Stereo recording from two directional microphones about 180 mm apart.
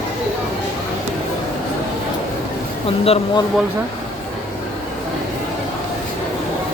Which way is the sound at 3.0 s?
35° left (ahead or behind).